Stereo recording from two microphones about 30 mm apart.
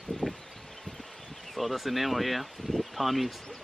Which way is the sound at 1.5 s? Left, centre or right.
Centre.